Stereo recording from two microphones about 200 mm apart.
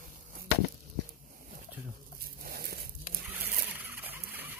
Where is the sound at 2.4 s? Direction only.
50° right (ahead or behind).